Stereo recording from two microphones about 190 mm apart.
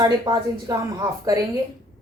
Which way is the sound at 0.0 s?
20° right (ahead or behind).